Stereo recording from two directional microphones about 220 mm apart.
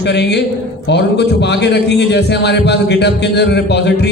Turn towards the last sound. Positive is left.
turn(degrees=50)  # may be behind; listen again after turning